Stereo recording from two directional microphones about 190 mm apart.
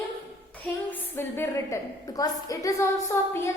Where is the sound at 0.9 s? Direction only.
10° left (ahead or behind).